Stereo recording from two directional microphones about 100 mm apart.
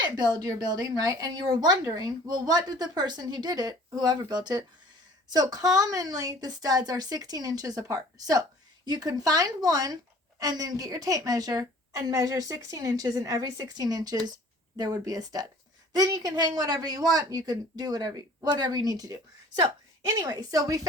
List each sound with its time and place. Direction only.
0.3 s a woman's voice: 40° right (ahead or behind)